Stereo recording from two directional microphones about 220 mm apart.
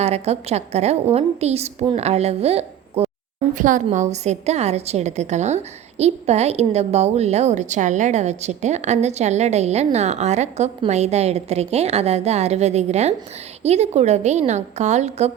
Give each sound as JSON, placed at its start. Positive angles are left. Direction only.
{"t": 0.0, "sound": "a woman's voice", "side_deg": -30}